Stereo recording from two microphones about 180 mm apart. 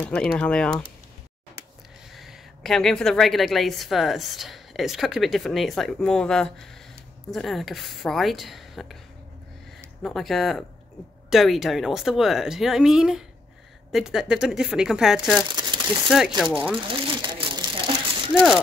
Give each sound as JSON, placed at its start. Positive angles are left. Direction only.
{"t": 0.0, "sound": "a woman's voice", "side_deg": 5}
{"t": 2.1, "sound": "a woman's voice", "side_deg": 0}
{"t": 10.0, "sound": "a woman's voice", "side_deg": 0}
{"t": 15.5, "sound": "crumpling", "side_deg": -25}
{"t": 16.5, "sound": "a woman's voice", "side_deg": -5}
{"t": 16.9, "sound": "crumpling", "side_deg": -25}